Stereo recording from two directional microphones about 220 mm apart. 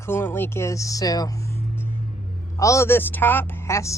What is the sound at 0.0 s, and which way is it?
A woman's voice, 10° left (ahead or behind).